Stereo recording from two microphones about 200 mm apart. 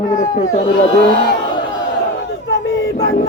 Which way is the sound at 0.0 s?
35° left (ahead or behind).